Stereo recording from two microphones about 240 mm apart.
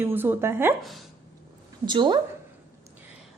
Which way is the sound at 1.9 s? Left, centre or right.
Centre.